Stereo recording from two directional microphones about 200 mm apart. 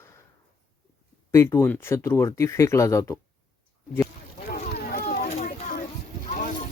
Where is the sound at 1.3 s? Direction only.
15° left (ahead or behind).